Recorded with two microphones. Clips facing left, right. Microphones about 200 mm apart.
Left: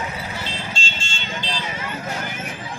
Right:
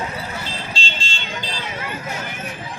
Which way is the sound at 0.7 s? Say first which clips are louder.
Right 2 dB; 35° right (ahead or behind).